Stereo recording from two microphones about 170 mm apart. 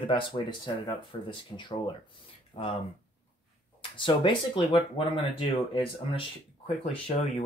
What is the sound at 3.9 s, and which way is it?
Speech, 30° left (ahead or behind).